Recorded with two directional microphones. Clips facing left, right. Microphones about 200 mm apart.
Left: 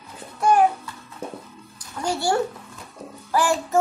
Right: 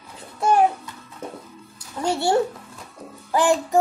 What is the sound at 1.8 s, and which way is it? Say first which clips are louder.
Music: right 2 dB; 25° right (ahead or behind).